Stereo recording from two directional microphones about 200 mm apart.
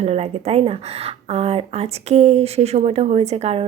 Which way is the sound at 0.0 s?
35° right (ahead or behind).